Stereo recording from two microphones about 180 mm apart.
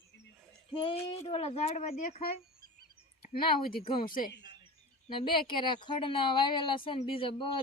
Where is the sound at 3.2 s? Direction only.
55° left (ahead or behind).